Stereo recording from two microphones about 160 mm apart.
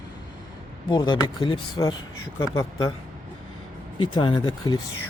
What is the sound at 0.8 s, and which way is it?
Speech, 30° left (ahead or behind).